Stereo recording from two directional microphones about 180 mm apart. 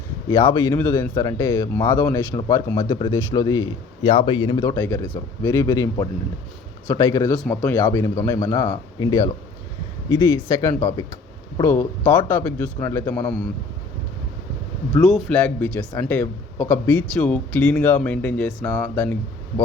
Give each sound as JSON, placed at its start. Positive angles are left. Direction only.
{"t": 0.3, "sound": "speech", "side_deg": 20}
{"t": 4.8, "sound": "speech", "side_deg": 10}
{"t": 7.4, "sound": "speech", "side_deg": 5}
{"t": 15.0, "sound": "speech", "side_deg": 0}